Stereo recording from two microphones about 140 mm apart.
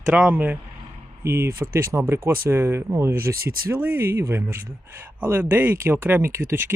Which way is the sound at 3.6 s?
15° right (ahead or behind).